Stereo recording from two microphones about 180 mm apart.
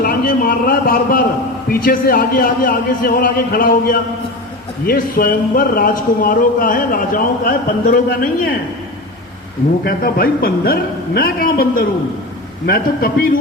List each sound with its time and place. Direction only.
0.0 s a sound: 55° left (ahead or behind)
1.7 s speech: 55° left (ahead or behind)
9.8 s a man's voice: 55° left (ahead or behind)